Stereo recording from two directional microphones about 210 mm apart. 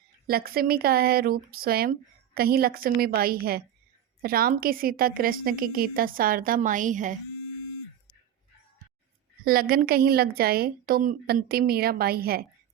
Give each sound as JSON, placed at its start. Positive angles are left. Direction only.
{"t": 0.3, "sound": "speech", "side_deg": -45}
{"t": 9.4, "sound": "speech", "side_deg": -45}